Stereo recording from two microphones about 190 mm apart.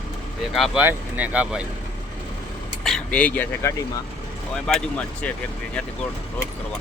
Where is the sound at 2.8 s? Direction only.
5° left (ahead or behind).